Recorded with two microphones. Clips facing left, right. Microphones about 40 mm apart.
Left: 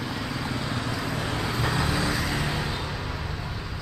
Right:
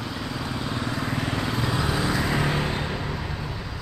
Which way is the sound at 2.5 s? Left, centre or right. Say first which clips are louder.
Right 3 dB; right.